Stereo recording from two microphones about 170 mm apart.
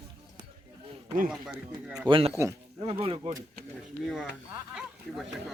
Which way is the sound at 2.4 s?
15° right (ahead or behind).